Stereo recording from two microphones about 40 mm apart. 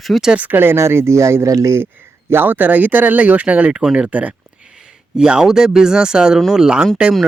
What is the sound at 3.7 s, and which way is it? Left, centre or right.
Speech, right.